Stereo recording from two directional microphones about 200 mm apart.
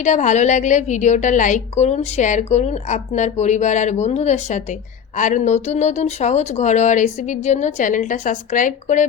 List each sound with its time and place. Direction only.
0.0 s a woman's voice: 35° left (ahead or behind)